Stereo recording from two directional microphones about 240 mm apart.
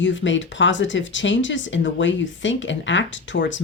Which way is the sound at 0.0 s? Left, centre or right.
Left.